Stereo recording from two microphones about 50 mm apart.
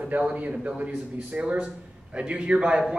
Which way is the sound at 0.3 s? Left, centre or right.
Right.